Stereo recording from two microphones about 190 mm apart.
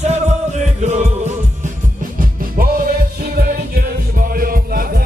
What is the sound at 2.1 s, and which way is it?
Music, 50° right (ahead or behind).